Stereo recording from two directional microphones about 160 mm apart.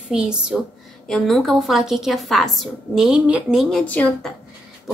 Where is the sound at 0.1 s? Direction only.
5° right (ahead or behind).